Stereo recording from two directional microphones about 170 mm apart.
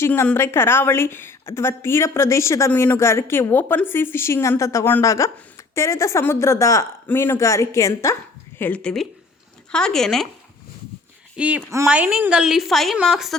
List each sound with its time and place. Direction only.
0.0 s a woman's voice: 10° left (ahead or behind)
11.3 s a woman's voice: 10° right (ahead or behind)